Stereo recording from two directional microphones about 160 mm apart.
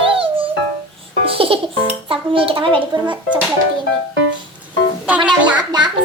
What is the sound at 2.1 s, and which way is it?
A child's voice, 35° right (ahead or behind).